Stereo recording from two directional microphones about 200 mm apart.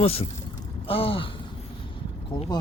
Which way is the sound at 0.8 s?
30° left (ahead or behind).